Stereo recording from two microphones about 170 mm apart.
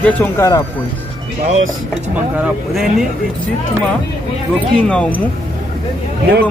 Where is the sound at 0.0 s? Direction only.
15° left (ahead or behind).